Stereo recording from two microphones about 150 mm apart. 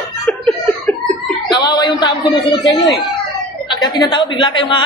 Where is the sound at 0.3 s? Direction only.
10° left (ahead or behind).